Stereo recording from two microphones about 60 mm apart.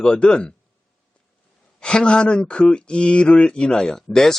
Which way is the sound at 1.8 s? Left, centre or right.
Centre.